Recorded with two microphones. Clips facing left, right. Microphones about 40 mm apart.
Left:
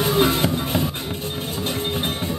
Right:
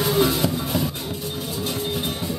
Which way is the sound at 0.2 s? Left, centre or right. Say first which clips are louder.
Left 2 dB; left.